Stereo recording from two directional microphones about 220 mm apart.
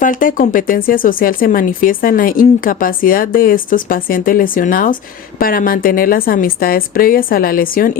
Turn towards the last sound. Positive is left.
turn(degrees=40)  # may be behind; listen again after turning